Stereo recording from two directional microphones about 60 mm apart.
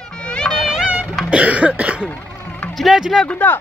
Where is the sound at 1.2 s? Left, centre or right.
Right.